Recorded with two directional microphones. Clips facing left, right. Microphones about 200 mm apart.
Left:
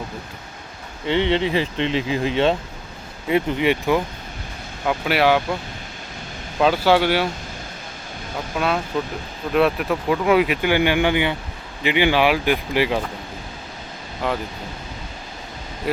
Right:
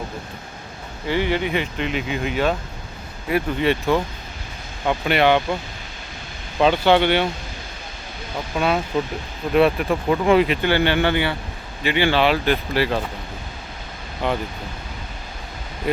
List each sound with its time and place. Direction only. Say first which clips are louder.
1.0 s speech: left 2 dB; 25° left (ahead or behind); by 5.5 s 5° left (ahead or behind)
6.6 s speech: right 1 dB; 5° left (ahead or behind)
8.5 s speech: right 2 dB; centre (ahead or behind)
14.2 s speech: right 1 dB; centre (ahead or behind)